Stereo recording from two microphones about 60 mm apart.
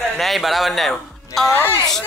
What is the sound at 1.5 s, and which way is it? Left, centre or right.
Speech, left.